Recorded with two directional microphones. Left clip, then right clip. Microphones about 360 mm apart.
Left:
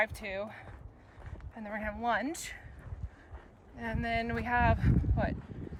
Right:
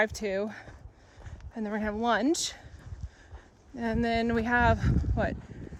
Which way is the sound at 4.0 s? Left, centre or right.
Centre.